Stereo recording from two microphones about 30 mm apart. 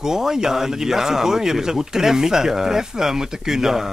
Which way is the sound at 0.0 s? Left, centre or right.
Centre.